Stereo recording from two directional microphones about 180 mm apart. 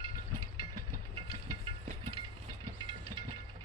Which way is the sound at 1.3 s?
30° right (ahead or behind).